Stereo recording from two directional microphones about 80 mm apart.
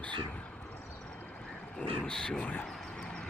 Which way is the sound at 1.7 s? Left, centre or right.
Centre.